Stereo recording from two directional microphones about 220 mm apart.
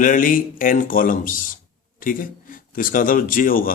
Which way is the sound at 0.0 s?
40° left (ahead or behind).